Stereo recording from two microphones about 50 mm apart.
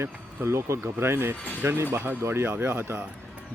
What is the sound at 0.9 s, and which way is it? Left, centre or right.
Speech, right.